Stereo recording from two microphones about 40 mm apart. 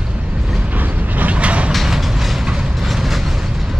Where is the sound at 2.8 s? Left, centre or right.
Centre.